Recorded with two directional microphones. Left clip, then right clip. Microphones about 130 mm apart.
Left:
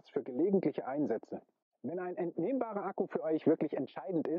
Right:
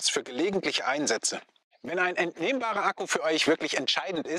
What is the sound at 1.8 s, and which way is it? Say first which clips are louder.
Speech: right 11 dB; 35° left (ahead or behind).